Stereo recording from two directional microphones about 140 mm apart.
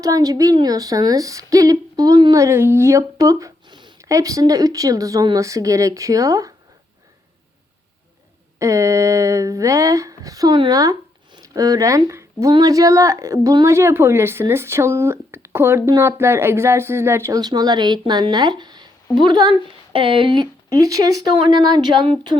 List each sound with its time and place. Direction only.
0.0 s speech: 25° right (ahead or behind)
8.5 s speech: 20° right (ahead or behind)